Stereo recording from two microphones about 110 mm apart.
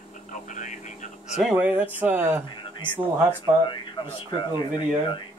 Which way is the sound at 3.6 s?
50° left (ahead or behind).